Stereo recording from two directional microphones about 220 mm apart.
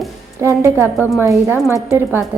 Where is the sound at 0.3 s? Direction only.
10° right (ahead or behind).